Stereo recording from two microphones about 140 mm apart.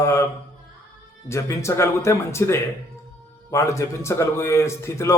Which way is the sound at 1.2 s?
20° left (ahead or behind).